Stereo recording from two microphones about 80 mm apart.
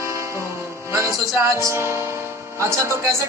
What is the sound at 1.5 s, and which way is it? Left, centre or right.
Music, right.